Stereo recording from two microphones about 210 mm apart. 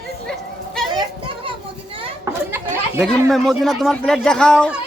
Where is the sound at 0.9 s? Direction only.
20° right (ahead or behind).